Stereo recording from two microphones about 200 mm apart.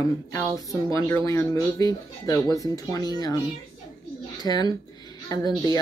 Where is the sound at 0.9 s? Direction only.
15° left (ahead or behind).